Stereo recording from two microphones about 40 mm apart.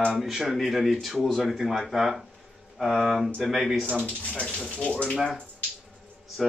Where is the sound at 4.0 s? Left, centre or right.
Left.